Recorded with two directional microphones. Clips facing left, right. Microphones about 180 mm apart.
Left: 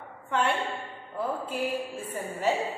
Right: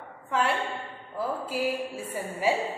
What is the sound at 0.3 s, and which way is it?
A woman's voice, centre (ahead or behind).